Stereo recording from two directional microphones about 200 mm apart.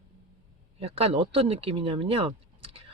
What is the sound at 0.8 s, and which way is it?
Speech, 30° right (ahead or behind).